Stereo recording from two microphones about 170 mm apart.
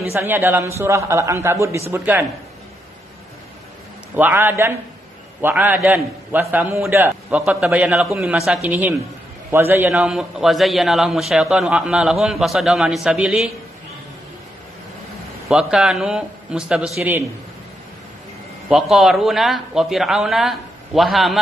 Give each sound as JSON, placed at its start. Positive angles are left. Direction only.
{"t": 0.1, "sound": "a man's voice", "side_deg": -15}
{"t": 4.1, "sound": "a man's voice", "side_deg": -10}
{"t": 15.4, "sound": "a man's voice", "side_deg": 0}
{"t": 18.7, "sound": "a man's voice", "side_deg": 0}